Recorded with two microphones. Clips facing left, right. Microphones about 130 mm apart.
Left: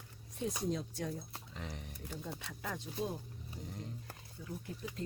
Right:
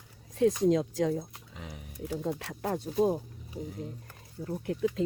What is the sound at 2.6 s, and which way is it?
Speech, 50° right (ahead or behind).